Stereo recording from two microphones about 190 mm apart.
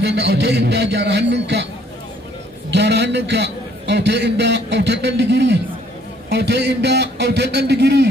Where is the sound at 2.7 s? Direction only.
65° right (ahead or behind).